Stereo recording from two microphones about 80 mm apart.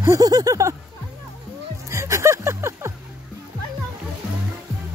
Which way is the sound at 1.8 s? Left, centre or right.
Right.